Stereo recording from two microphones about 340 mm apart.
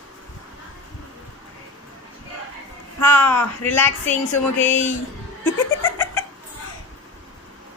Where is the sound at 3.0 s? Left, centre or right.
Centre.